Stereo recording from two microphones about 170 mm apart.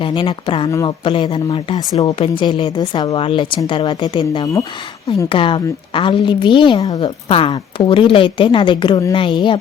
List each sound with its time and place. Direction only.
0.0 s a woman's voice: 30° left (ahead or behind)
0.7 s a woman's voice: 20° left (ahead or behind)
1.0 s a woman's voice: 30° left (ahead or behind)